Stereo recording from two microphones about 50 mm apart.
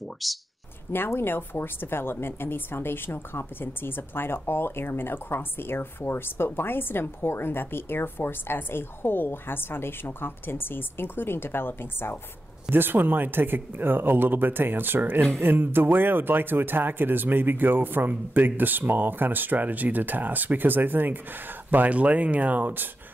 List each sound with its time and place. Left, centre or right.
0.2 s speech: centre
0.9 s speech: left
12.7 s speech: right